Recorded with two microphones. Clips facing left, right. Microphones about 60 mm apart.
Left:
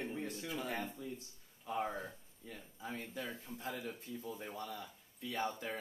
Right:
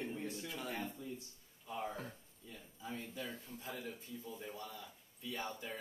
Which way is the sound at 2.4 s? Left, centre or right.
Left.